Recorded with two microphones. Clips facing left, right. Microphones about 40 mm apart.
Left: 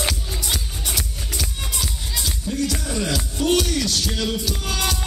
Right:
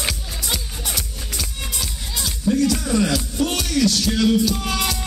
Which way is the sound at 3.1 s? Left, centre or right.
Left.